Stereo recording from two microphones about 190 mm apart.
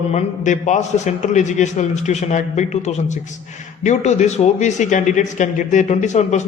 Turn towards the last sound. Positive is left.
turn(degrees=35)  # may be behind; listen again after turning